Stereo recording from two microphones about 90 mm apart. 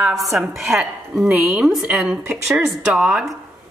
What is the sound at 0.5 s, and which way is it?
Speech, 30° right (ahead or behind).